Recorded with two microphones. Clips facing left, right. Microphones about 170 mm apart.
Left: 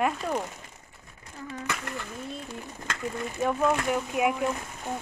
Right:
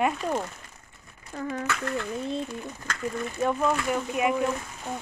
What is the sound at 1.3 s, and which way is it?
Speech, 90° right.